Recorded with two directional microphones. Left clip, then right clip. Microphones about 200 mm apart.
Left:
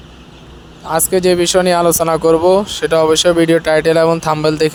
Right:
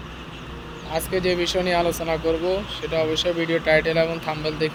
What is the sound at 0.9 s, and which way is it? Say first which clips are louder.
Speech: left 10 dB; 45° left (ahead or behind).